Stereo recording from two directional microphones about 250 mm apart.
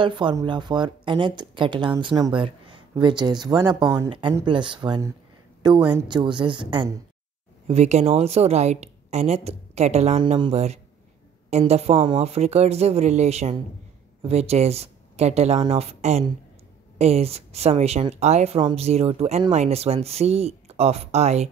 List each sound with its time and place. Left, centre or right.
0.0 s speech: centre